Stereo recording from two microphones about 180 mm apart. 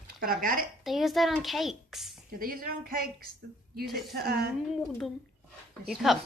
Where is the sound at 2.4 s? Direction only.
55° right (ahead or behind).